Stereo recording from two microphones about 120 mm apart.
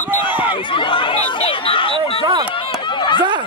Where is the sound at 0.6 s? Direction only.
45° left (ahead or behind).